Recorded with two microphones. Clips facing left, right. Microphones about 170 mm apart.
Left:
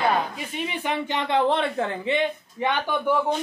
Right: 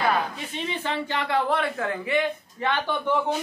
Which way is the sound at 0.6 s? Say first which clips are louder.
Left 1 dB; 15° left (ahead or behind).